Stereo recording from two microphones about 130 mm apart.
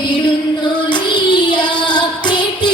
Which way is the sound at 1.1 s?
35° left (ahead or behind).